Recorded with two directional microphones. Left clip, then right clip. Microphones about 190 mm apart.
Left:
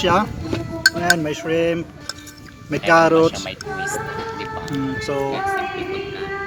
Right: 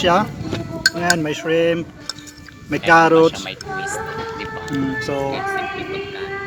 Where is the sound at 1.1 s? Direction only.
35° right (ahead or behind).